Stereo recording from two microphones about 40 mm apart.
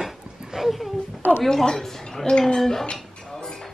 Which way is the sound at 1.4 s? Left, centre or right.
Centre.